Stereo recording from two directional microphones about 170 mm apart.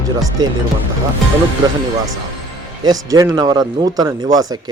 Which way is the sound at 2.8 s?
20° right (ahead or behind).